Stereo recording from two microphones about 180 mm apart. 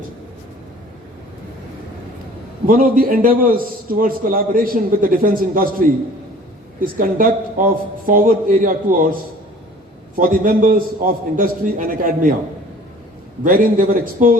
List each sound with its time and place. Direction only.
2.6 s a man's voice: 50° right (ahead or behind)
10.2 s a man's voice: 50° right (ahead or behind)
13.4 s a man's voice: 50° right (ahead or behind)